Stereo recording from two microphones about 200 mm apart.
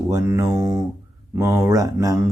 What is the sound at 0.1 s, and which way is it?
Speech, 15° right (ahead or behind).